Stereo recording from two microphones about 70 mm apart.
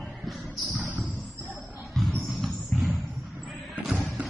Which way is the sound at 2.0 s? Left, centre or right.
Centre.